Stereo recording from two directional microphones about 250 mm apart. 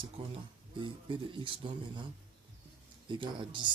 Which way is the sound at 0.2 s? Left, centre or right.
Right.